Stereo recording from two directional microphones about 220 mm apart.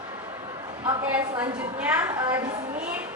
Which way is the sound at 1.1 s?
5° right (ahead or behind).